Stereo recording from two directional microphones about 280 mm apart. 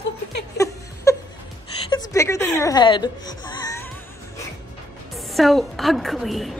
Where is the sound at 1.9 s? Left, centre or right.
Centre.